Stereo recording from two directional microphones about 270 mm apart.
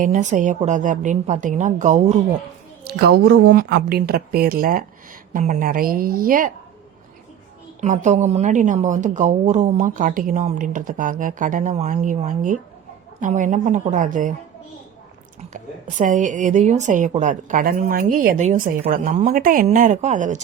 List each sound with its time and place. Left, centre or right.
0.0 s a woman's voice: right
7.8 s a woman's voice: right
15.5 s a woman's voice: right